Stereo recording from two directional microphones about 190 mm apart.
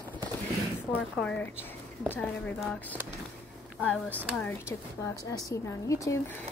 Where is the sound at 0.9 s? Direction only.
5° left (ahead or behind).